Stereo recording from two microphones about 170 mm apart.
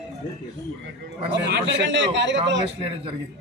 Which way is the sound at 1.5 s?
90° right.